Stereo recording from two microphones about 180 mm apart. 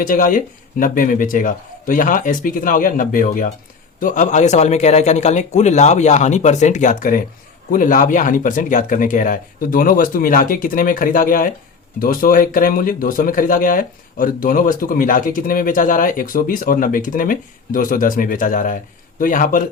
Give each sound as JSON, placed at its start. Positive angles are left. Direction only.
{"t": 0.0, "sound": "a man's voice", "side_deg": 50}